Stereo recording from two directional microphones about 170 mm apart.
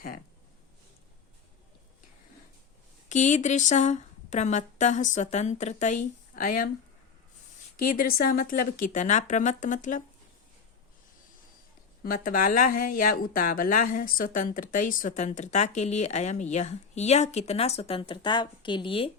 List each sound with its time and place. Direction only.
3.1 s speech: 45° left (ahead or behind)
7.9 s speech: 55° left (ahead or behind)
12.0 s speech: 55° left (ahead or behind); by 19.1 s 30° left (ahead or behind)